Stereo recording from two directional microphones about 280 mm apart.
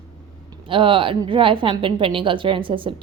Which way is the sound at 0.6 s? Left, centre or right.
Centre.